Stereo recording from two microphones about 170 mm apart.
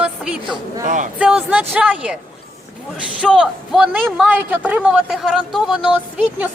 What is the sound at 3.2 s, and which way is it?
A man's voice, 5° right (ahead or behind).